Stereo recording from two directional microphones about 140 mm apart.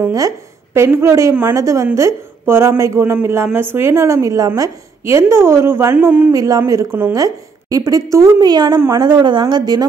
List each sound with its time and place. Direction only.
0.0 s a woman's voice: 25° right (ahead or behind)
6.3 s a woman's voice: 25° right (ahead or behind)